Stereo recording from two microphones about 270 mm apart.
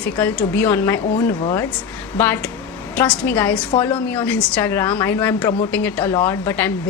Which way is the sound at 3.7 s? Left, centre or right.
Centre.